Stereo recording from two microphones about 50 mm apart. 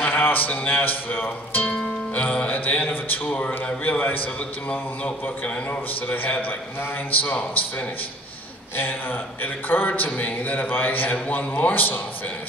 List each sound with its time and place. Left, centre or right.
0.1 s speech: left
2.1 s a man's voice: left
3.3 s a man's voice: left
3.8 s speech: left
5.2 s speech: left
8.7 s speech: left